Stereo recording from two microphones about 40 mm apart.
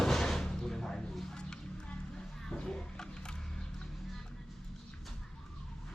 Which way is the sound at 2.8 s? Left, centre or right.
Centre.